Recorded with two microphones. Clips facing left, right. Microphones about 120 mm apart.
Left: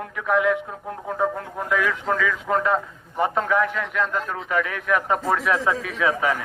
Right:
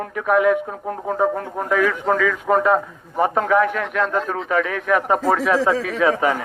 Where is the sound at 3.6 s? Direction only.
75° right (ahead or behind).